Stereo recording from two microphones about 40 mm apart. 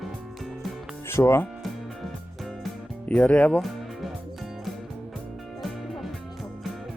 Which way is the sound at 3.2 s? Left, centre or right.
Left.